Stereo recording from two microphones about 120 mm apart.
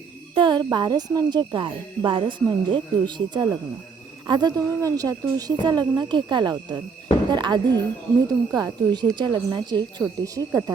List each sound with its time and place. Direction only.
0.3 s speech: 40° right (ahead or behind)
10.2 s speech: 30° right (ahead or behind)